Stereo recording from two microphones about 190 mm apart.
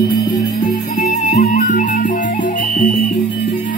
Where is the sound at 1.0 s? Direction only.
40° left (ahead or behind).